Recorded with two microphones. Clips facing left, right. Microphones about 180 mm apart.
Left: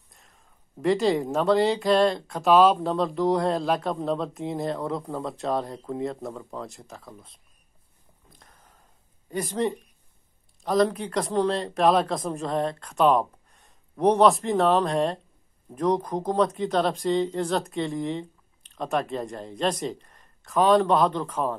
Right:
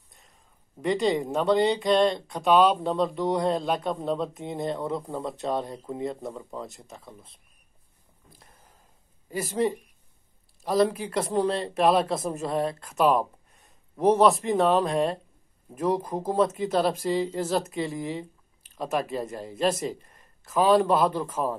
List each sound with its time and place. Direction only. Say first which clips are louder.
0.1 s speech: left 1 dB; centre (ahead or behind)
9.3 s a man's voice: even; 5° right (ahead or behind)